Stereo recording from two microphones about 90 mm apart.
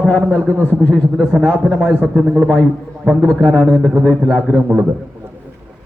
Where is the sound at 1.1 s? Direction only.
5° left (ahead or behind).